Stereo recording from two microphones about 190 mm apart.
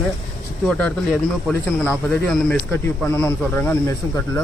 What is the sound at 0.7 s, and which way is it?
Speech, 5° left (ahead or behind).